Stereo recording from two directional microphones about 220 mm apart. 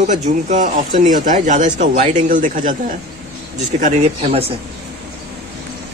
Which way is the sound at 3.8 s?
30° right (ahead or behind).